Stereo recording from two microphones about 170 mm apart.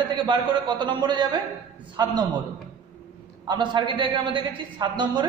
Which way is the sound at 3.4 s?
25° right (ahead or behind).